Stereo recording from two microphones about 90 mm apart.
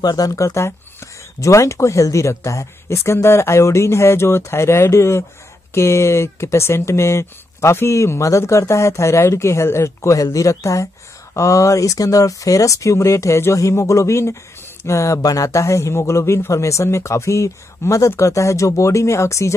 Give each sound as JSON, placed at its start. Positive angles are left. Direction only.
{"t": 0.0, "sound": "speech", "side_deg": 45}